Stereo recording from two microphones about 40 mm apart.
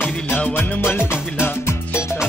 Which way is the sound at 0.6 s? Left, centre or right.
Left.